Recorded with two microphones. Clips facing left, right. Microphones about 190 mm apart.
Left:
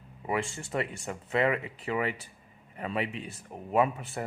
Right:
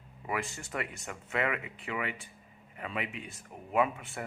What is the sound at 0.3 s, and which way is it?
Speech, 30° left (ahead or behind).